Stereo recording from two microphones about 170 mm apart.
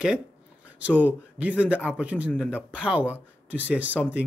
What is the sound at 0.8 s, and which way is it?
A man's voice, 10° right (ahead or behind).